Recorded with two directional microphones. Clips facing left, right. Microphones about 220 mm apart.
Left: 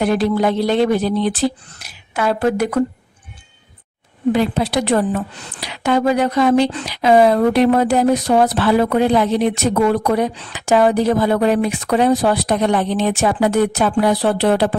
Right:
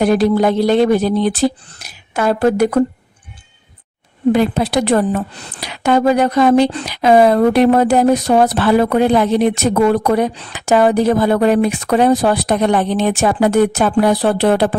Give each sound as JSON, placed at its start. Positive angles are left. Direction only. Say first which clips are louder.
{"t": 0.0, "sound": "speech", "louder": "right 3 dB", "side_deg": -40}
{"t": 4.3, "sound": "speech", "louder": "right 3 dB", "side_deg": -50}